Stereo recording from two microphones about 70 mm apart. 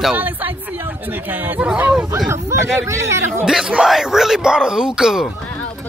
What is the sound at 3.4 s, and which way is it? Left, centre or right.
Speech, centre.